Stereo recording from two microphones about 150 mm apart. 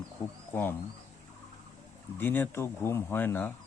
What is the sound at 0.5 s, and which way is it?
Speech, 15° left (ahead or behind).